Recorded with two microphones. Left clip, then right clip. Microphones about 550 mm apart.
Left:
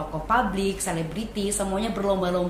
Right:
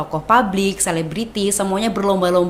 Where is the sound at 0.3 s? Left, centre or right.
Right.